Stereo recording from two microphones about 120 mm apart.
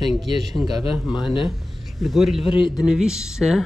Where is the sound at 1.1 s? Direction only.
40° left (ahead or behind).